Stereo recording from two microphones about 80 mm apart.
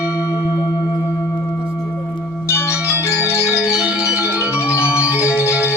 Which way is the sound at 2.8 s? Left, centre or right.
Right.